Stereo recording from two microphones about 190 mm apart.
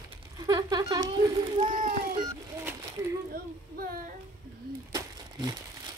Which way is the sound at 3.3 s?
50° right (ahead or behind).